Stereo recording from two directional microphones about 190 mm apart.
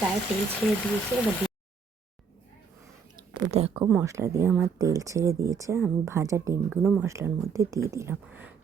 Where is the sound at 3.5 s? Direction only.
35° right (ahead or behind).